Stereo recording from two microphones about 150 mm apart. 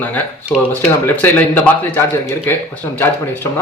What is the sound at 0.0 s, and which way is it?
Speech, 10° left (ahead or behind).